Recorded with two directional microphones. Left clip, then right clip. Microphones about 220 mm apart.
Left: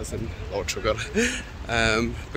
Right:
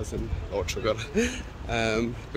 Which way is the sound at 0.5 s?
5° right (ahead or behind).